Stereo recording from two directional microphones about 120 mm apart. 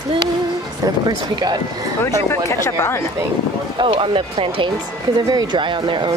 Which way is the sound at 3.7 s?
45° right (ahead or behind).